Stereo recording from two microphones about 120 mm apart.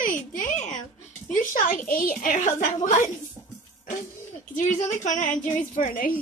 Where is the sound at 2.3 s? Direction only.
90° left.